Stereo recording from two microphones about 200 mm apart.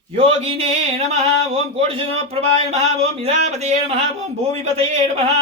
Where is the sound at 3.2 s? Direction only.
35° right (ahead or behind).